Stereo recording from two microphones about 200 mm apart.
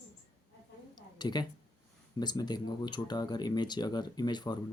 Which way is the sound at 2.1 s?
20° left (ahead or behind).